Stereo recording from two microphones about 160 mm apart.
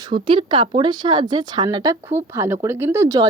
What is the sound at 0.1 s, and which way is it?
Speech, 30° right (ahead or behind).